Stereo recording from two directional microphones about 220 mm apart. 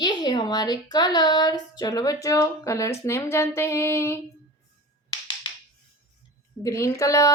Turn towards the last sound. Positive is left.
turn(degrees=15)  # may be behind; listen again after turning